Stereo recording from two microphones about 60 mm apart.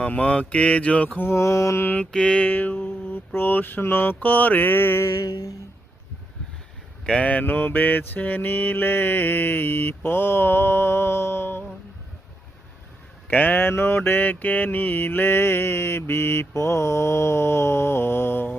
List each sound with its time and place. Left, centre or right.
0.0 s speech: centre
1.2 s mantra: left
1.8 s mantra: left
2.1 s speech: centre
2.5 s mantra: left
5.2 s a sound: left
7.0 s speech: centre
7.3 s mantra: left
13.2 s mantra: left